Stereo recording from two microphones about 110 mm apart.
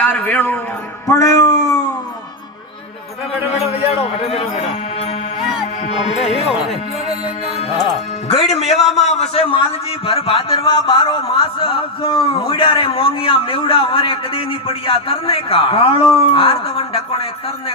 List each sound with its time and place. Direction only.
0.0 s a man's voice: 15° left (ahead or behind)
1.0 s a sound: 30° left (ahead or behind)
4.2 s speech: 60° left (ahead or behind)
6.1 s a man's voice: 60° left (ahead or behind)
8.4 s a man's voice: 70° left (ahead or behind)
8.7 s a man's voice: centre (ahead or behind)
9.0 s a man's voice: 80° left; by 17.2 s 55° left (ahead or behind)